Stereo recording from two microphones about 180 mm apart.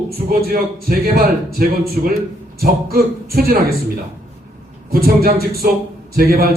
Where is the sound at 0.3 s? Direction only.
55° right (ahead or behind).